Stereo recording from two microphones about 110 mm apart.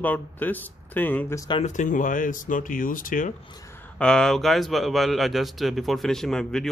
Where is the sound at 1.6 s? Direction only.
90° left.